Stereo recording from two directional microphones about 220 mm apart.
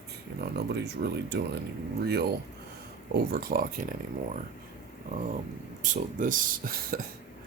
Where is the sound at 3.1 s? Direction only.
45° right (ahead or behind).